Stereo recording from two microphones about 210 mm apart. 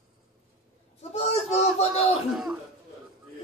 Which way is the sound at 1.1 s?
30° left (ahead or behind).